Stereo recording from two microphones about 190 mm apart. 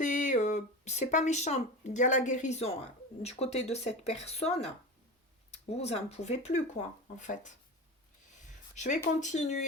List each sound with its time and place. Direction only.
0.0 s speech: 40° left (ahead or behind)
8.4 s a sound: 40° left (ahead or behind)
9.2 s speech: 40° left (ahead or behind)